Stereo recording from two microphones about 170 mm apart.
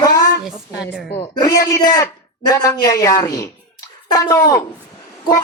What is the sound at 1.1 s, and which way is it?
A man's voice, 25° left (ahead or behind).